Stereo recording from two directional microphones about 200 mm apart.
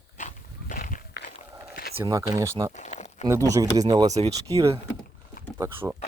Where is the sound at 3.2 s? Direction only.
15° right (ahead or behind).